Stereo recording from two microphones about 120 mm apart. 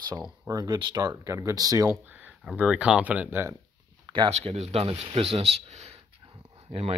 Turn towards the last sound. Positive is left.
turn(degrees=-55)  # may be behind; listen again after turning